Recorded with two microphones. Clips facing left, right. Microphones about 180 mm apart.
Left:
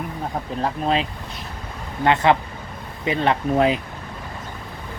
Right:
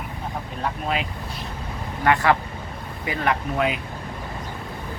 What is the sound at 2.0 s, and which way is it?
Speech, 20° left (ahead or behind).